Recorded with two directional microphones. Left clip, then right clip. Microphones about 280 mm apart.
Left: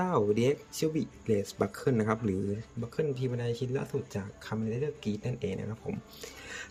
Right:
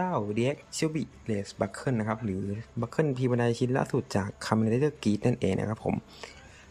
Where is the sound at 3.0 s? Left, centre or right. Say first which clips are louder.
Right 5 dB; centre.